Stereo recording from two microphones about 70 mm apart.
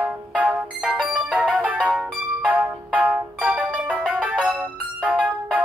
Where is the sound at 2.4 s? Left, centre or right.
Right.